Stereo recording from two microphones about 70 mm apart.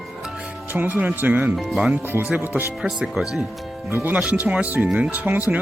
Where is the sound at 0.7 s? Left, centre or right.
Right.